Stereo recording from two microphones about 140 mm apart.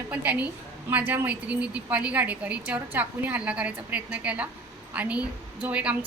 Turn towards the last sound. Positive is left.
turn(degrees=-10)  # may be behind; listen again after turning